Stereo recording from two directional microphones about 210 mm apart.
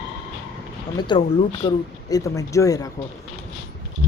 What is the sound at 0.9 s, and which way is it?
Speech, 20° left (ahead or behind).